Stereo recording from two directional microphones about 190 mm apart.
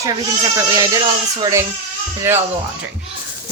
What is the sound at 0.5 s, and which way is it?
A woman's voice, 15° right (ahead or behind).